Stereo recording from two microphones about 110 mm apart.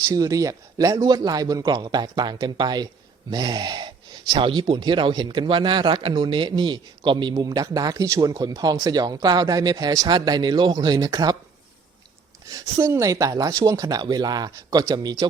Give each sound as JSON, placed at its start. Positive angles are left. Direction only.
{"t": 0.1, "sound": "a man's voice", "side_deg": -30}
{"t": 12.5, "sound": "a man's voice", "side_deg": -30}